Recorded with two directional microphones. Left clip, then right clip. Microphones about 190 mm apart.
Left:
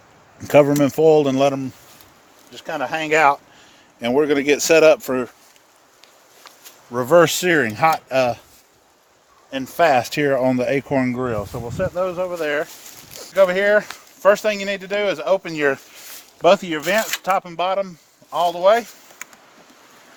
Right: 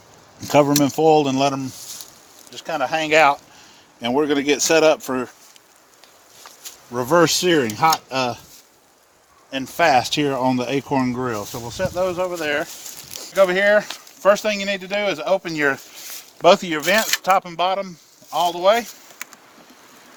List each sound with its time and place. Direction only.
0.4 s speech: 45° left (ahead or behind)
6.9 s speech: 40° left (ahead or behind)
9.5 s speech: 40° left (ahead or behind)
16.4 s speech: 15° left (ahead or behind)
17.7 s speech: 45° left (ahead or behind)